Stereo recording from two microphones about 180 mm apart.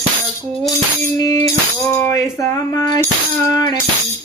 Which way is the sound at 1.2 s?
20° left (ahead or behind).